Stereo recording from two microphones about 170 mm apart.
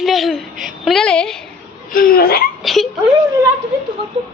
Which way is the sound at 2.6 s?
Centre (ahead or behind).